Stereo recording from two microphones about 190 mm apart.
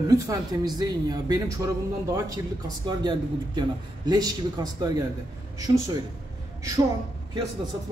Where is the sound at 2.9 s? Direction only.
25° right (ahead or behind).